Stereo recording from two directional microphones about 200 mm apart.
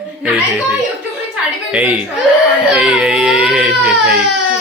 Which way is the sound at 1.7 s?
10° right (ahead or behind).